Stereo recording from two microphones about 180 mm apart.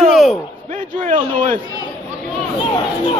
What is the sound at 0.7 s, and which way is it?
Speech, 40° right (ahead or behind).